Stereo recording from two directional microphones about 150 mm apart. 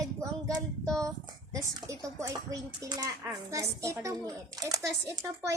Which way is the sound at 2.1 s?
20° right (ahead or behind).